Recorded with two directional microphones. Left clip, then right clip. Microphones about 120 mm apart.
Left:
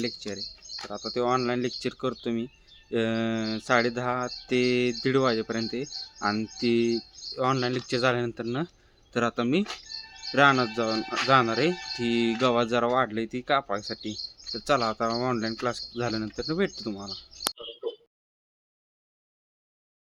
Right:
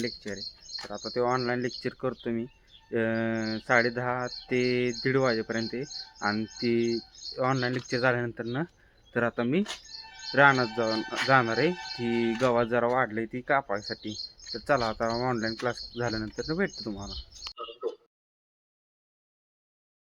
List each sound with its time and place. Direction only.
0.9 s speech: 10° left (ahead or behind)
11.1 s speech: 20° left (ahead or behind)